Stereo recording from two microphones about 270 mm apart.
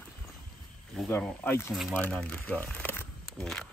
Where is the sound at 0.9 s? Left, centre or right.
Centre.